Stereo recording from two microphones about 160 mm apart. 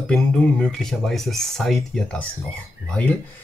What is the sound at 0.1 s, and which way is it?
Speech, 5° left (ahead or behind).